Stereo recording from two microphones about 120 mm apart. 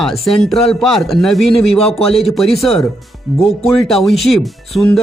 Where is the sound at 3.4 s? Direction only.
55° left (ahead or behind).